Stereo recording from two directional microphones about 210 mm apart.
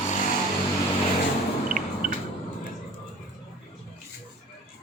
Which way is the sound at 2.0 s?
40° right (ahead or behind).